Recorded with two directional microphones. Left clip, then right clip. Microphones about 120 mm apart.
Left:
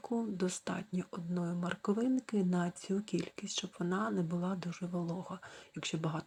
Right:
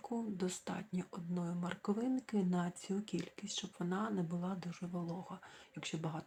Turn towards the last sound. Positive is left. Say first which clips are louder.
# left 5 dB
turn(degrees=35)  # may be behind; listen again after turning